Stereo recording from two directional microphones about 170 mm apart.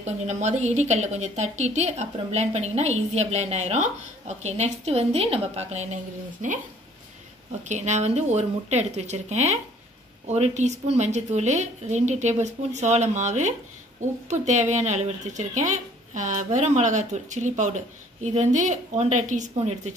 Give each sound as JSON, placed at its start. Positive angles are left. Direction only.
{"t": 0.0, "sound": "speech", "side_deg": -45}
{"t": 7.6, "sound": "speech", "side_deg": -45}